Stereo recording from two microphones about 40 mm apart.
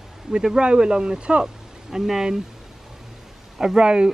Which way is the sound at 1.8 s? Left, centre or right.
Centre.